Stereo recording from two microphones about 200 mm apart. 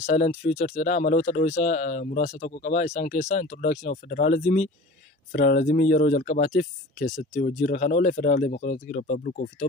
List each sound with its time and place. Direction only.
0.0 s speech: 35° left (ahead or behind)